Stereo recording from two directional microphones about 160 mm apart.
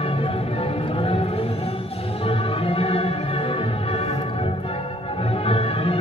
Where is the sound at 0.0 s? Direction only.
35° left (ahead or behind).